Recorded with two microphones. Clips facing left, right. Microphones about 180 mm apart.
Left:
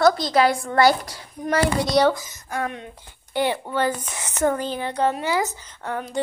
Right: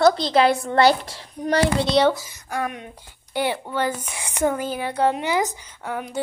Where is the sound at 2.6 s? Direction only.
15° right (ahead or behind).